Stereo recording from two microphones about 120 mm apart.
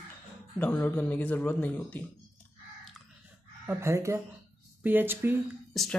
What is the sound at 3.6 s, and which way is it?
Speech, 25° right (ahead or behind).